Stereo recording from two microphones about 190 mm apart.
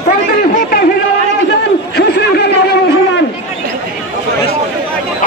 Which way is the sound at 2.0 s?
60° left (ahead or behind).